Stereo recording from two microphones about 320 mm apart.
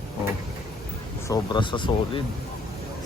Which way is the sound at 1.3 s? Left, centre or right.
Centre.